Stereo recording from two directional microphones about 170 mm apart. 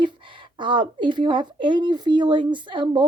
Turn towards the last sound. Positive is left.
turn(degrees=-30)  # may be behind; listen again after turning